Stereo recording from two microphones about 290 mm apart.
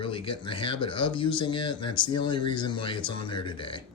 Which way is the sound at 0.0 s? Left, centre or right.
Centre.